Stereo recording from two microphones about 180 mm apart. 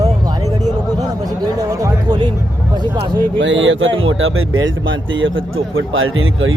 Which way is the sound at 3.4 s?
90° right.